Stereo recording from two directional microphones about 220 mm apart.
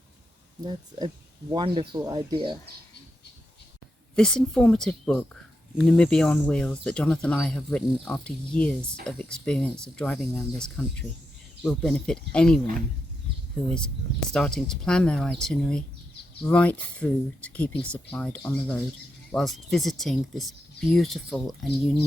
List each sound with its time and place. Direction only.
0.6 s speech: 20° right (ahead or behind)
4.1 s speech: 5° left (ahead or behind)
13.7 s speech: 5° left (ahead or behind)